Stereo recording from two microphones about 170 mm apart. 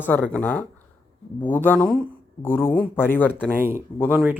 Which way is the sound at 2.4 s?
10° left (ahead or behind).